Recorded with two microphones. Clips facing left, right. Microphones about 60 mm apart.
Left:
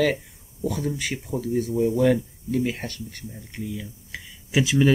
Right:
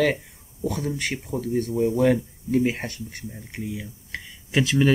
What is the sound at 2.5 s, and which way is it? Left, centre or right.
Speech, right.